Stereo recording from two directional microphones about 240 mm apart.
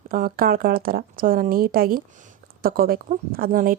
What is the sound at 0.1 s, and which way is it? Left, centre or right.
Speech, right.